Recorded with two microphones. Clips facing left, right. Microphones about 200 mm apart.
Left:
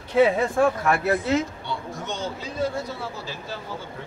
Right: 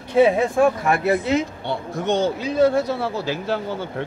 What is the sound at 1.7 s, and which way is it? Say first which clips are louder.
A man's voice: right 9 dB; 65° right (ahead or behind).